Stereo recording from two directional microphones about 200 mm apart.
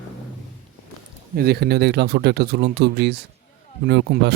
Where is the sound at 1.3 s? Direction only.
50° right (ahead or behind).